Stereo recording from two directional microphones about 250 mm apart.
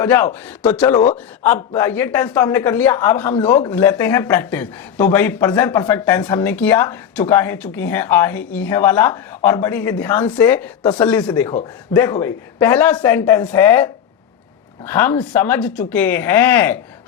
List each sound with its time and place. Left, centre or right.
0.0 s speech: centre
0.9 s speech: left
1.4 s speech: centre